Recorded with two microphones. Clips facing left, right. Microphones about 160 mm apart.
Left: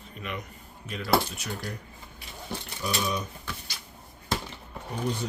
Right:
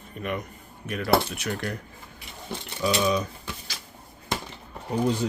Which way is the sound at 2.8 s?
90° right.